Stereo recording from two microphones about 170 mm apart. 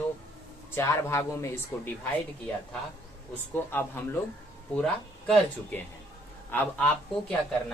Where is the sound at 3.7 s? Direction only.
15° left (ahead or behind).